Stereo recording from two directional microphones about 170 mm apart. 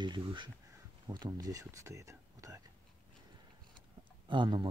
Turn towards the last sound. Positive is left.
turn(degrees=-30)  # may be behind; listen again after turning